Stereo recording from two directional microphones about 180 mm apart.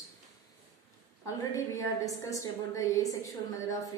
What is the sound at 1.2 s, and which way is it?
A woman's voice, 15° left (ahead or behind).